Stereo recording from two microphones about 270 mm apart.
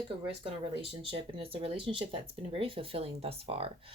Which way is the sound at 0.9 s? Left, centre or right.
Centre.